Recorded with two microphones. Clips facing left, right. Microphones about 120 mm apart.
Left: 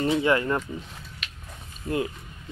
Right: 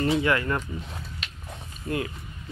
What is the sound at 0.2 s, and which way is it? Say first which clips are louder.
Speech: left 2 dB; 25° left (ahead or behind).